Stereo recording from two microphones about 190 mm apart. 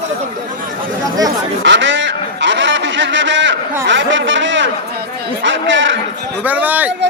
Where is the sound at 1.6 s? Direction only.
70° right (ahead or behind).